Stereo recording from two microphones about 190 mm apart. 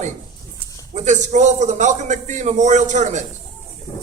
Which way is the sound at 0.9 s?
40° right (ahead or behind).